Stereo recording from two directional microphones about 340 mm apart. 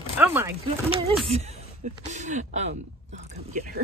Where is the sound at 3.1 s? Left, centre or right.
Right.